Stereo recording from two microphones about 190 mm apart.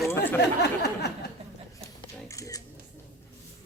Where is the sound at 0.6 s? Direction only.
60° left (ahead or behind).